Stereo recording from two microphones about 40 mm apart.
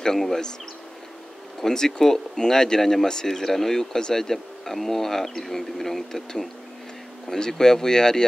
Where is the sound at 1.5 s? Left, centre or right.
Centre.